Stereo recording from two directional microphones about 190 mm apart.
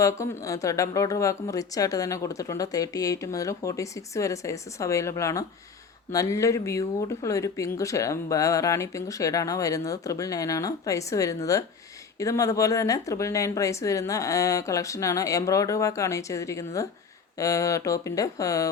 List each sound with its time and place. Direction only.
0.0 s speech: 15° left (ahead or behind)